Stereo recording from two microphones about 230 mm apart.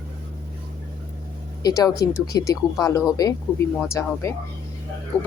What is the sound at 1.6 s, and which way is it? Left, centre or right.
Speech, centre.